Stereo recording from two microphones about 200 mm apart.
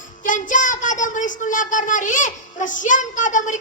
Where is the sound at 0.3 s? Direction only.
40° left (ahead or behind).